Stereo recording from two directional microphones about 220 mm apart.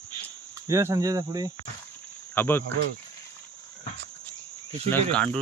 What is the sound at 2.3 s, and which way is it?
Speech, 10° left (ahead or behind).